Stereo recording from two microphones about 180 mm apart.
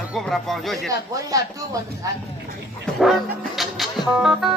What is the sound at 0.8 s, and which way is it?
Speech, 20° right (ahead or behind).